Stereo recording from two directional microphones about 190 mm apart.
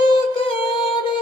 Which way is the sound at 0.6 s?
30° left (ahead or behind).